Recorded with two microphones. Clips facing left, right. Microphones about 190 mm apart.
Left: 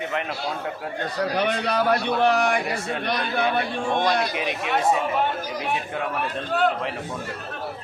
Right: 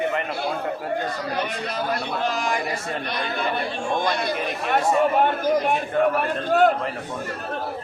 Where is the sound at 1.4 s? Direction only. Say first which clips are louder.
Left 4 dB; 65° left (ahead or behind).